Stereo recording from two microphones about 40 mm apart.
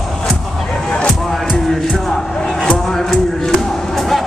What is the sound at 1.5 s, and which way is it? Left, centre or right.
Music, centre.